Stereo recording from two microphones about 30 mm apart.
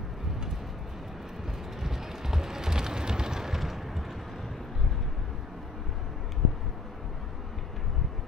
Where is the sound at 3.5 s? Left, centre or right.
Centre.